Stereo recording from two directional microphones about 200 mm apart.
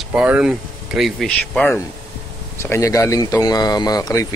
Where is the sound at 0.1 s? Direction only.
5° right (ahead or behind).